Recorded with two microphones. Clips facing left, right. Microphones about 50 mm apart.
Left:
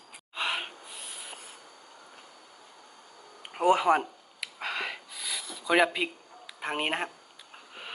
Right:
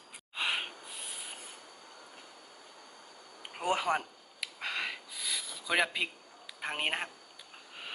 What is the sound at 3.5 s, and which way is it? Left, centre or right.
Speech, centre.